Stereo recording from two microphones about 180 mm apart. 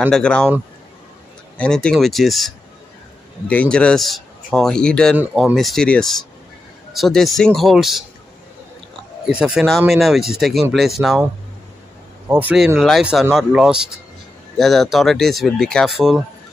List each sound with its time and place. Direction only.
0.0 s speech: 5° left (ahead or behind)
1.6 s speech: 5° left (ahead or behind)
9.2 s speech: 5° right (ahead or behind)
12.3 s speech: 10° right (ahead or behind)